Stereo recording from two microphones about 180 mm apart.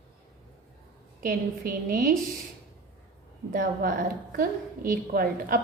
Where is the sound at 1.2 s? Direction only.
55° right (ahead or behind).